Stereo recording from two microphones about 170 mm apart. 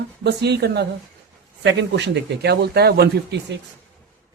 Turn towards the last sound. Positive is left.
turn(degrees=-75)  # may be behind; listen again after turning